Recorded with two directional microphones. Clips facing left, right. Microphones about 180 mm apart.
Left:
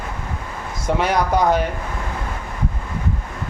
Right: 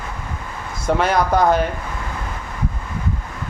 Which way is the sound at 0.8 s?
15° left (ahead or behind).